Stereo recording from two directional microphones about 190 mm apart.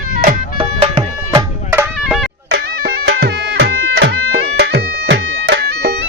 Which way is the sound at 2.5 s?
60° right (ahead or behind).